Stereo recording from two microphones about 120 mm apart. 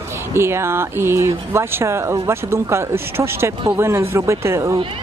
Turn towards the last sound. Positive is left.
turn(degrees=-25)  # may be behind; listen again after turning